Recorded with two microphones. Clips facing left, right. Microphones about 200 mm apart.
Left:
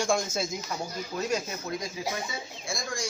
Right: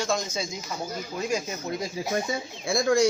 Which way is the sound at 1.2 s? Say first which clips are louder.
Right 1 dB; 10° right (ahead or behind).